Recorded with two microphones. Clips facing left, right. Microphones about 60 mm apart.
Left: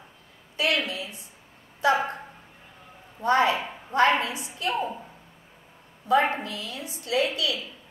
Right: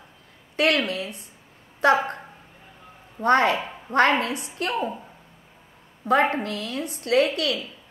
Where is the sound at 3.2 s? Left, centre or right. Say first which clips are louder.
Right 2 dB; right.